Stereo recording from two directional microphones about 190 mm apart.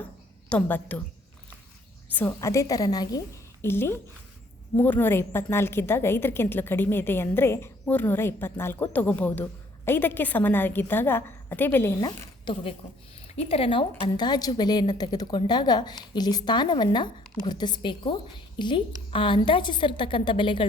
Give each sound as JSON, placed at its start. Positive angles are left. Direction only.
{"t": 0.5, "sound": "a woman's voice", "side_deg": 10}
{"t": 2.1, "sound": "a woman's voice", "side_deg": 10}
{"t": 13.2, "sound": "a woman's voice", "side_deg": 35}